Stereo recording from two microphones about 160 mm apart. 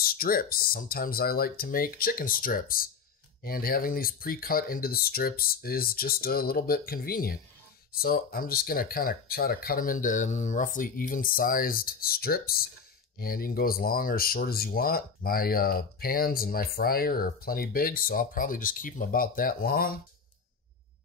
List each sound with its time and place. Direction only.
0.0 s speech: 65° left (ahead or behind)